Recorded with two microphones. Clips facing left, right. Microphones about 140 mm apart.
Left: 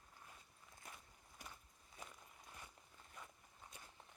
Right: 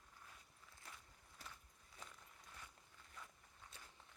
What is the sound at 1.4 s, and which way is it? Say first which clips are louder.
Walk: left 1 dB; 15° left (ahead or behind).